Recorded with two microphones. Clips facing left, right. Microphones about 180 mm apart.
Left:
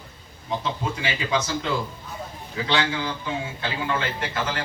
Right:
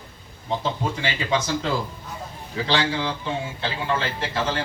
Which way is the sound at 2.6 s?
30° right (ahead or behind).